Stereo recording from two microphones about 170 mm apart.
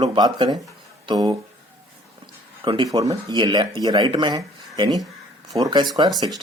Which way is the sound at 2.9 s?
20° right (ahead or behind).